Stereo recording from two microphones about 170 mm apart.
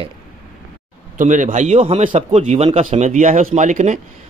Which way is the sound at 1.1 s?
45° right (ahead or behind).